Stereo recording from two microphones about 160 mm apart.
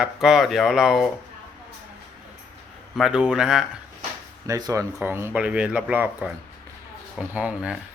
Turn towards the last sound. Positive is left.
turn(degrees=-5)  # may be behind; listen again after turning